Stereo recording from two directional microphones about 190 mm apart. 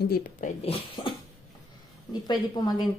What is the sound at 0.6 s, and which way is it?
Speech, 30° left (ahead or behind).